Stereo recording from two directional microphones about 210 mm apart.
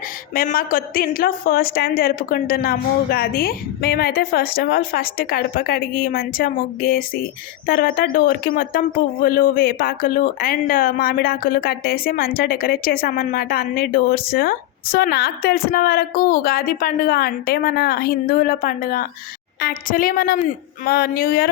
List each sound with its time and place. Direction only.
0.3 s speech: 45° left (ahead or behind)